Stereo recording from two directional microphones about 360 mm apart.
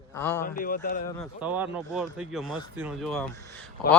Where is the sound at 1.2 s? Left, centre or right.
Centre.